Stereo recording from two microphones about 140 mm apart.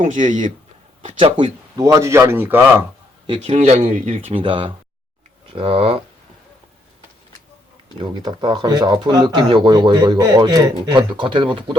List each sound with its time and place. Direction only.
0.0 s speech: 65° right (ahead or behind)
1.2 s speech: 35° right (ahead or behind)
1.8 s speech: 20° right (ahead or behind)
3.2 s a man's voice: 40° right (ahead or behind)
3.8 s speech: 70° right (ahead or behind)
4.3 s speech: 40° right (ahead or behind)
7.9 s speech: 30° right (ahead or behind)